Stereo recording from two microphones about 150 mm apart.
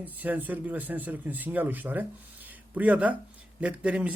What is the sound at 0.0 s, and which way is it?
Speech, 10° right (ahead or behind).